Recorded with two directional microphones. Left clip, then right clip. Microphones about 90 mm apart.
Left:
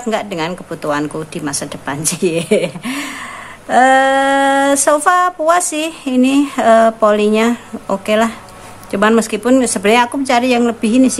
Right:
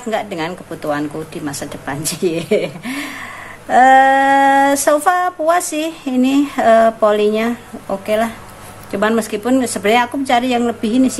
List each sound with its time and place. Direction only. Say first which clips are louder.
0.1 s speech: left 1 dB; 20° left (ahead or behind)
3.6 s female singing: right 1 dB; 15° left (ahead or behind)
4.8 s speech: left 2 dB; 25° left (ahead or behind)
7.8 s speech: left 3 dB; 40° left (ahead or behind)
8.9 s speech: left 4 dB; 30° left (ahead or behind)